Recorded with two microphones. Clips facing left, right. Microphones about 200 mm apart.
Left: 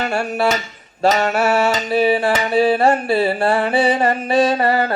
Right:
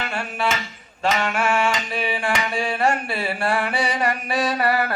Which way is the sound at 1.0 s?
40° left (ahead or behind).